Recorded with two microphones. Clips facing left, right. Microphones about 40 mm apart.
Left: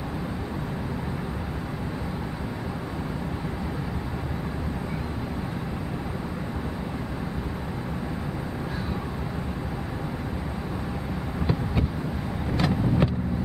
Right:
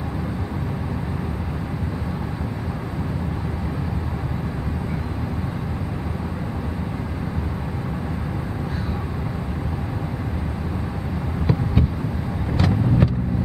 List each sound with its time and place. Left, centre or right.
12.5 s vehicle: centre